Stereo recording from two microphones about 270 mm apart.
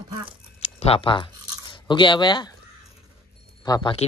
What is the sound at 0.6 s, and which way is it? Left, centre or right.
Crunch, left.